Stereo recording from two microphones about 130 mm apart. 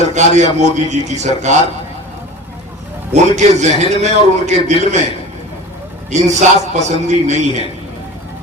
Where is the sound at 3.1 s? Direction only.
60° right (ahead or behind).